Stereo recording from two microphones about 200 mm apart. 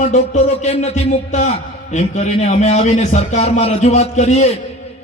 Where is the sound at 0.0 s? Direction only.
35° left (ahead or behind).